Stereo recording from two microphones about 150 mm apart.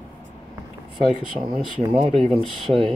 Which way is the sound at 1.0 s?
30° right (ahead or behind).